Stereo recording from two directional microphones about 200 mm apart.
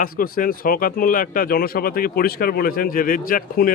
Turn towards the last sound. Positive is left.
turn(degrees=45)  # may be behind; listen again after turning